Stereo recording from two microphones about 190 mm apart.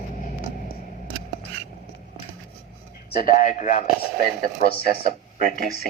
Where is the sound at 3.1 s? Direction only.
50° left (ahead or behind).